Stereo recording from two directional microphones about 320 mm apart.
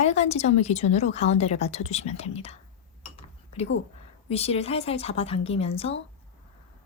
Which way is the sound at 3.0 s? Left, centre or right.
Centre.